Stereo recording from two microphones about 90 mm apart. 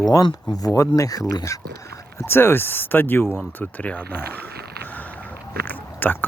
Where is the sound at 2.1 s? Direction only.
25° left (ahead or behind).